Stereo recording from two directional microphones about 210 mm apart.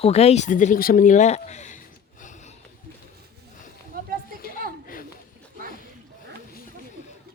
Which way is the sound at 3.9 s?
45° right (ahead or behind).